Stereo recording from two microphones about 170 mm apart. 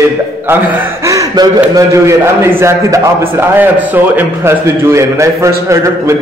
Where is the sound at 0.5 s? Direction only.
15° right (ahead or behind).